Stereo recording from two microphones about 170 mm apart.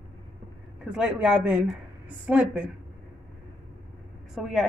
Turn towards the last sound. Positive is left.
turn(degrees=0)  # may be behind; listen again after turning